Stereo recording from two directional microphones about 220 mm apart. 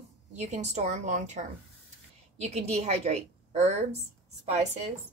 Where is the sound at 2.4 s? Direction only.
30° right (ahead or behind).